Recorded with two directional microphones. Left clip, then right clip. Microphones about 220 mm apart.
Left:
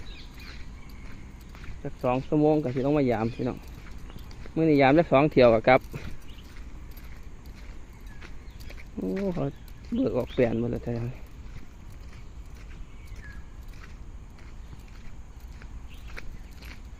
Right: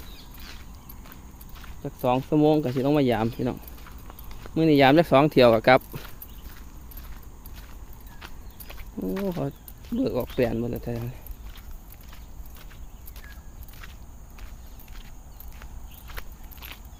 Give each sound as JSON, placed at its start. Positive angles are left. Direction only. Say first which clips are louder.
{"t": 1.8, "sound": "speech", "louder": "right 3 dB", "side_deg": -50}
{"t": 9.1, "sound": "speech", "louder": "right 1 dB", "side_deg": -5}
{"t": 9.9, "sound": "speech", "louder": "even", "side_deg": -25}